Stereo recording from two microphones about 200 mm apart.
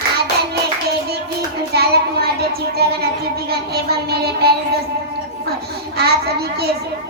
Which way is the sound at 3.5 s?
50° right (ahead or behind).